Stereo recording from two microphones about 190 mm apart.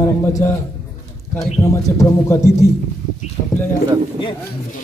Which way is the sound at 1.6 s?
15° left (ahead or behind).